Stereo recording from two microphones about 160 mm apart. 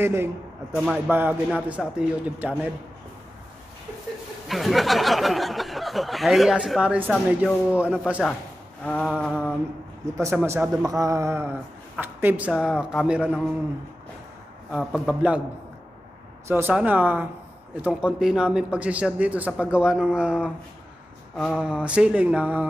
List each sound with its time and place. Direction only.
0.0 s a man's voice: 15° right (ahead or behind)
0.7 s a man's voice: centre (ahead or behind)
4.5 s a man's voice: centre (ahead or behind)
8.8 s a sound: 5° left (ahead or behind)
9.2 s speech: 5° left (ahead or behind)
10.2 s a man's voice: 15° right (ahead or behind)
10.8 s mantra: 20° right (ahead or behind)
12.0 s a man's voice: 10° right (ahead or behind)
14.7 s a man's voice: 5° right (ahead or behind)
16.4 s a man's voice: 15° right (ahead or behind)